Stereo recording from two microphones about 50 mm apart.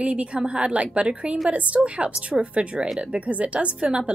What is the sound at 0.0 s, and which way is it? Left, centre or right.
Speech, right.